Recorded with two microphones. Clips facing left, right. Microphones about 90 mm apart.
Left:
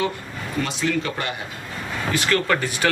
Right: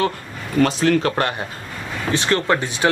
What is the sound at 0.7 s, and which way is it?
Speech, 50° right (ahead or behind).